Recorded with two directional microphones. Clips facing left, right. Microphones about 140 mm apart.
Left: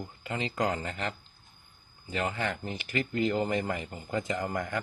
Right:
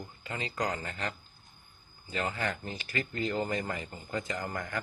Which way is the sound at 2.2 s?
20° left (ahead or behind).